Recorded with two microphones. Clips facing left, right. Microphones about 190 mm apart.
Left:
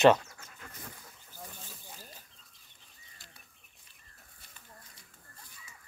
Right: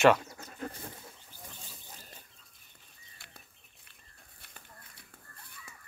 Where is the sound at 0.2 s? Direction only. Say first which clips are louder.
Right 11 dB; 35° right (ahead or behind).